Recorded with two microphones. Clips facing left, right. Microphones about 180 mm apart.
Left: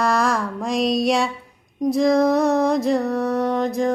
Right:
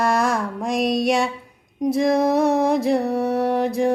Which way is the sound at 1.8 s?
5° right (ahead or behind).